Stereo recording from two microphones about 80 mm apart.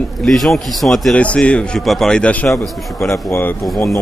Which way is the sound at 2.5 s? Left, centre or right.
Centre.